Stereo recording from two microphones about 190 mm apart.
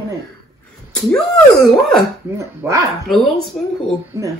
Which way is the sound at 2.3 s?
15° right (ahead or behind).